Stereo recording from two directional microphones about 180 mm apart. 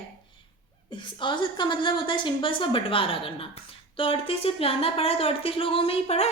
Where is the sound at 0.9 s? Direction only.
25° left (ahead or behind).